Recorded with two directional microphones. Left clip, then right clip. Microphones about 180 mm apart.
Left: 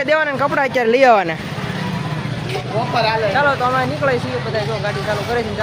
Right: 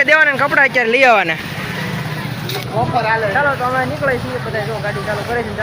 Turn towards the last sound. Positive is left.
turn(degrees=5)  # may be behind; listen again after turning